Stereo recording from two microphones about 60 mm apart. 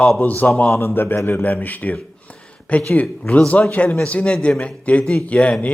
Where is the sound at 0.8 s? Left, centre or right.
Left.